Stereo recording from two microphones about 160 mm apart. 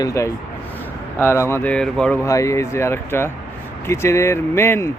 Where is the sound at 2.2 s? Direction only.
20° left (ahead or behind).